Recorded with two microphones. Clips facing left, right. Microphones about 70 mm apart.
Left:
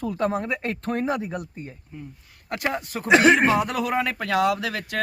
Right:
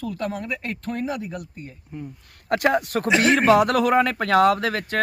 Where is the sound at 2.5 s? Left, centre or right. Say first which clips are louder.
Right 7 dB; right.